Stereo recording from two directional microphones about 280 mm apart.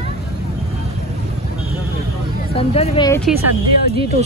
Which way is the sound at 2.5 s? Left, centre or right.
Left.